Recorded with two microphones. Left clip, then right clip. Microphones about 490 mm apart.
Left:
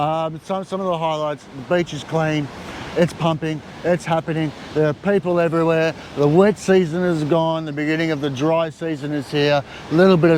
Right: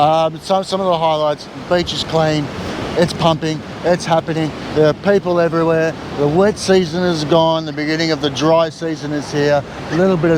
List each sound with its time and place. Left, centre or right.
0.0 s speech: centre; by 10.3 s left